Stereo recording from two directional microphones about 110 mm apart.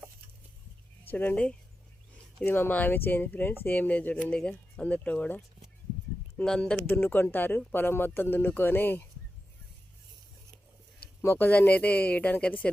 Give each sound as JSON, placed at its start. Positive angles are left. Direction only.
{"t": 1.0, "sound": "speech", "side_deg": 15}
{"t": 11.2, "sound": "speech", "side_deg": 20}